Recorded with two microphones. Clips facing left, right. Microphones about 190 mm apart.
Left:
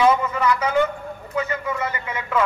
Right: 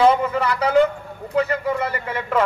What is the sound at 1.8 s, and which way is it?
Speech, 55° right (ahead or behind).